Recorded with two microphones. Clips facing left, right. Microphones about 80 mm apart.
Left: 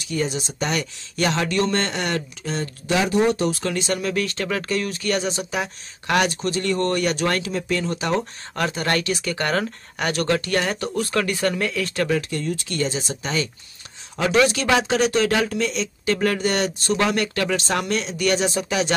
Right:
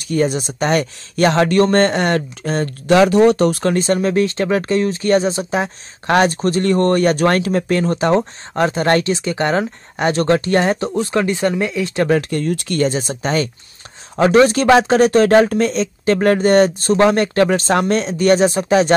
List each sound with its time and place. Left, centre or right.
0.0 s speech: right
3.0 s speech: right
12.1 s speech: right